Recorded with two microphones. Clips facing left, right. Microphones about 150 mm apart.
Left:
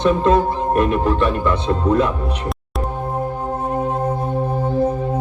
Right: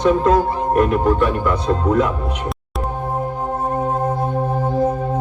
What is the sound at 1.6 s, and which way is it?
Speech, 30° left (ahead or behind).